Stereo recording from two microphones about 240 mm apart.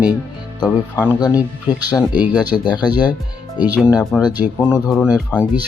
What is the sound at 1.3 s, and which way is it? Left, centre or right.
Speech, centre.